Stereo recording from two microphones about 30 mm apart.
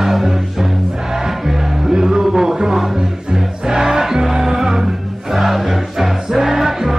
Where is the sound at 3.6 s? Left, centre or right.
Right.